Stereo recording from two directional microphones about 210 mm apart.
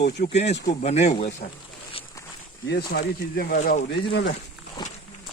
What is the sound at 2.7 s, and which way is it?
Speech, 50° left (ahead or behind).